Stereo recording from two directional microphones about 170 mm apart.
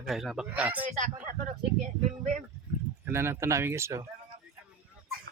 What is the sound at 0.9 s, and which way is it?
Speech, 45° right (ahead or behind).